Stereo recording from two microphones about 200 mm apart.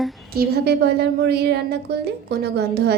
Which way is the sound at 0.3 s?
55° right (ahead or behind).